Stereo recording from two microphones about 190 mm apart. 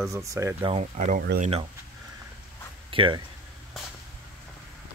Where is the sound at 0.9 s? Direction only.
40° right (ahead or behind).